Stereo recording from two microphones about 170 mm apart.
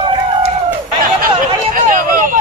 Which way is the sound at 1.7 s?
50° right (ahead or behind).